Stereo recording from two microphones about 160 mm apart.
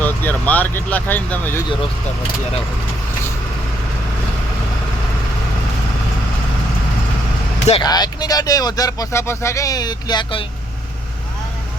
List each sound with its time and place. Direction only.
0.0 s speech: 10° left (ahead or behind)
7.8 s speech: 25° left (ahead or behind)